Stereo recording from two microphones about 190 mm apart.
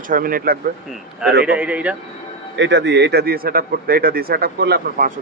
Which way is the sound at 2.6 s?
65° right (ahead or behind).